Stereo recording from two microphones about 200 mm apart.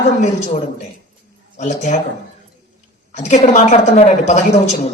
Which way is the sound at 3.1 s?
35° left (ahead or behind).